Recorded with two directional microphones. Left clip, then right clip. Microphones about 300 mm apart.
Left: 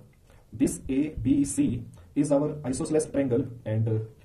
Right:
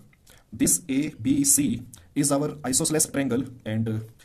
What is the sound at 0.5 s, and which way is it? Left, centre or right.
Speech, right.